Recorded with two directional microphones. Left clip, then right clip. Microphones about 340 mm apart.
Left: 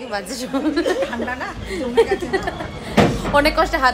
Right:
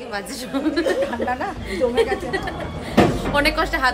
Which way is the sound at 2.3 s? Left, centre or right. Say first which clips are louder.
Left 3 dB; centre.